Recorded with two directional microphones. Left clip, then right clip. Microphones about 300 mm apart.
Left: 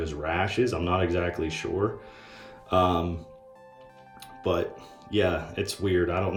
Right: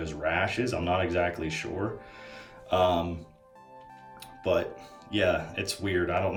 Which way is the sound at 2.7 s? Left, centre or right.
Centre.